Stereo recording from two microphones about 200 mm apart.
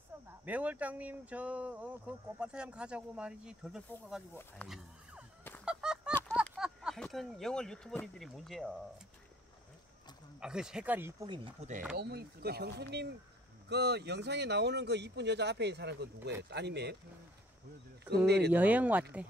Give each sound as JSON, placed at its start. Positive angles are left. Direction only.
{"t": 0.1, "sound": "a sound", "side_deg": -15}
{"t": 0.5, "sound": "speech", "side_deg": -5}
{"t": 4.6, "sound": "a sound", "side_deg": 0}
{"t": 5.7, "sound": "fowl", "side_deg": -5}
{"t": 6.5, "sound": "speech", "side_deg": -5}
{"t": 10.4, "sound": "speech", "side_deg": -5}
{"t": 11.2, "sound": "speech", "side_deg": -25}
{"t": 12.0, "sound": "speech", "side_deg": -55}
{"t": 18.1, "sound": "speech", "side_deg": -55}
{"t": 18.5, "sound": "speech", "side_deg": -5}